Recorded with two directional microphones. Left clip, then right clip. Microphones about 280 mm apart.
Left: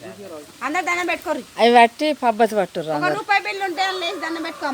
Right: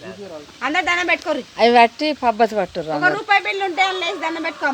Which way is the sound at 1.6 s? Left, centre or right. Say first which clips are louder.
Even; centre.